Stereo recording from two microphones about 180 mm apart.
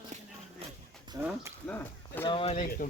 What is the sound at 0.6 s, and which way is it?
Livestock, 35° right (ahead or behind).